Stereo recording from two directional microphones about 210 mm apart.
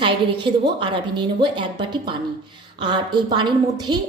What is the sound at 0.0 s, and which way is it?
A woman's voice, 20° right (ahead or behind).